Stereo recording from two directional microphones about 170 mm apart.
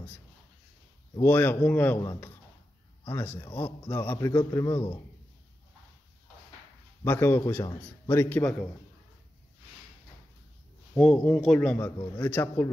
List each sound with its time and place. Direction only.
1.2 s a man's voice: 10° left (ahead or behind)
3.1 s a man's voice: 15° left (ahead or behind)
7.1 s a man's voice: 15° left (ahead or behind)
11.0 s a man's voice: 5° left (ahead or behind)